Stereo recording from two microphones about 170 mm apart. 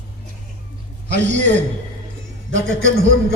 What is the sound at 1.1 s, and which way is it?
Speech, 90° right.